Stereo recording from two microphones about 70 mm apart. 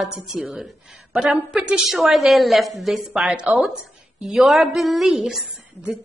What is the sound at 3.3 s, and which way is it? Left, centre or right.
Speech, centre.